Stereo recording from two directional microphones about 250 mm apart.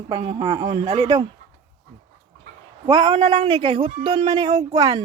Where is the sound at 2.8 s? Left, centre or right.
Centre.